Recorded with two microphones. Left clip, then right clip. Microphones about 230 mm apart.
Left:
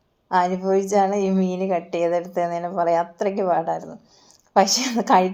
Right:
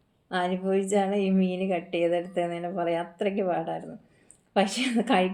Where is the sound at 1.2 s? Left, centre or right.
Left.